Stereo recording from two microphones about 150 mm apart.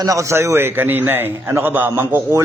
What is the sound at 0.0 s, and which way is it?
A man's voice, 20° right (ahead or behind).